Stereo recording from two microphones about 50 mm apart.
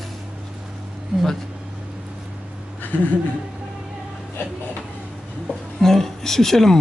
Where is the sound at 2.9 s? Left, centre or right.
Left.